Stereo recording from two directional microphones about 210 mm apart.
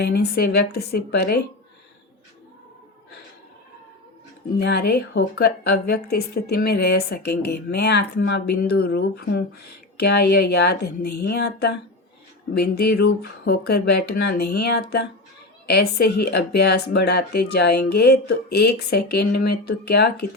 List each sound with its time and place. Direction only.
0.0 s a woman's voice: 50° left (ahead or behind)
4.5 s a woman's voice: 50° left (ahead or behind)